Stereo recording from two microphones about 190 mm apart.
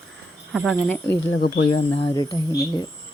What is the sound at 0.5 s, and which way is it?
Speech, centre (ahead or behind).